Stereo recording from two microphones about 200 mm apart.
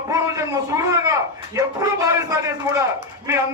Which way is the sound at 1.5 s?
15° right (ahead or behind).